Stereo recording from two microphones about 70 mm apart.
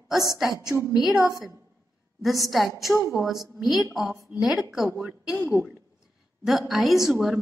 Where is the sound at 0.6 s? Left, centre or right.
Left.